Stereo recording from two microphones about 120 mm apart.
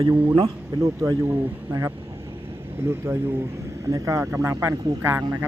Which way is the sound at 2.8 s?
20° right (ahead or behind).